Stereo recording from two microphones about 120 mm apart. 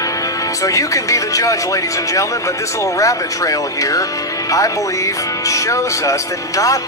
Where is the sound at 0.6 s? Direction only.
25° left (ahead or behind).